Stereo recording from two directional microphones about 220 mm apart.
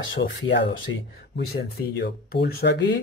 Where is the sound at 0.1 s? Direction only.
55° left (ahead or behind).